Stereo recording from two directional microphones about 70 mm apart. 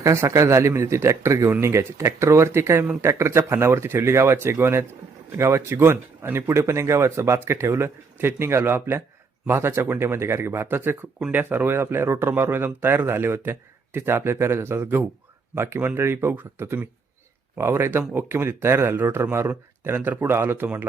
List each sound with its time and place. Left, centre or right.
0.0 s speech: right